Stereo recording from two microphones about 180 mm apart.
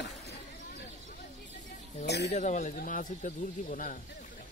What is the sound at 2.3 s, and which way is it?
Speech, 40° left (ahead or behind).